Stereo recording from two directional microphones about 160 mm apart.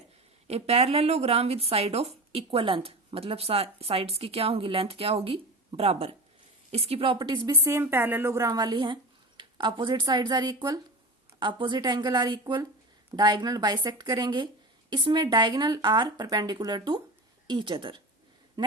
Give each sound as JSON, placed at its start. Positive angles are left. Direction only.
{"t": 0.4, "sound": "a woman's voice", "side_deg": -40}